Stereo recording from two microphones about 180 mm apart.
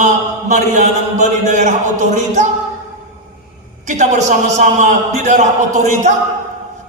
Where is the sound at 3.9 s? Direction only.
40° right (ahead or behind).